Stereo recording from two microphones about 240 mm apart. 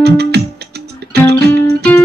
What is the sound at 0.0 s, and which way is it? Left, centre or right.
Music, right.